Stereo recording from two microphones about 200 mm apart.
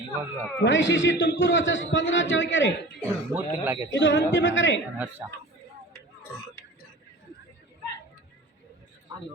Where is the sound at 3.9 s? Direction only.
65° left (ahead or behind).